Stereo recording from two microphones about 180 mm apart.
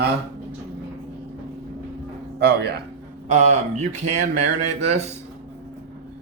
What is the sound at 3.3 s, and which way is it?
Speech, 40° right (ahead or behind).